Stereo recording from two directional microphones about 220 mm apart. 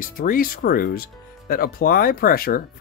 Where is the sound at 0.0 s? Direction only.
40° left (ahead or behind).